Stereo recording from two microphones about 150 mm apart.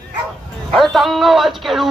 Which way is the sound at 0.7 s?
Centre (ahead or behind).